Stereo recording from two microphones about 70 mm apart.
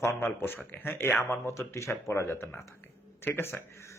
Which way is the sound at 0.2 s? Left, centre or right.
Left.